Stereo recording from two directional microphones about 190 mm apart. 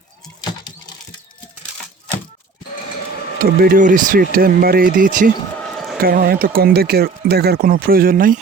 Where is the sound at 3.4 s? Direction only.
50° right (ahead or behind).